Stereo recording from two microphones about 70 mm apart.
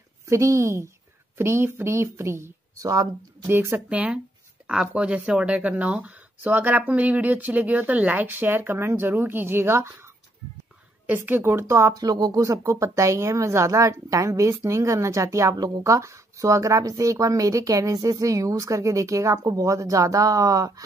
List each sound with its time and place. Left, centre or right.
0.3 s speech: right
2.8 s speech: right
3.4 s speech: right
3.9 s speech: centre; by 9.9 s right
11.1 s speech: right
11.6 s speech: right
11.9 s speech: right